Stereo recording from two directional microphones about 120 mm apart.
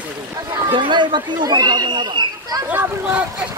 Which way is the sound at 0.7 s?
40° right (ahead or behind).